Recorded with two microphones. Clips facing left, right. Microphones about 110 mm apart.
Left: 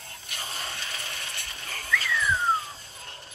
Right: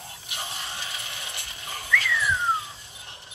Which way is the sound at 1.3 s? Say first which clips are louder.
Right 1 dB; 15° right (ahead or behind).